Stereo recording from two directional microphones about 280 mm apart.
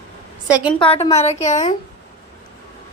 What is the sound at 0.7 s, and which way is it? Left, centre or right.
A woman's voice, centre.